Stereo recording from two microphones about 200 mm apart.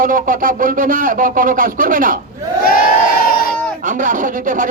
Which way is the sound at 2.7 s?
45° left (ahead or behind).